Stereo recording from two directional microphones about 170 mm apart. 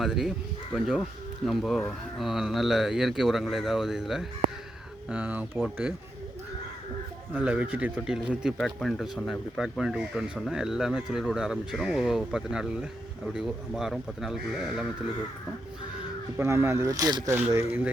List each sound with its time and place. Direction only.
0.0 s speech: centre (ahead or behind)
7.3 s speech: 10° right (ahead or behind)
16.4 s speech: 15° right (ahead or behind)